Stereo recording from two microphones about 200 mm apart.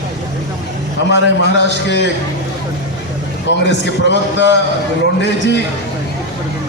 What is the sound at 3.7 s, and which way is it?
A man's voice, 60° left (ahead or behind).